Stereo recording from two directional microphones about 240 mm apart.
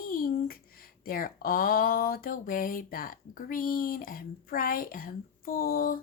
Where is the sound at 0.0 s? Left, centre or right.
Left.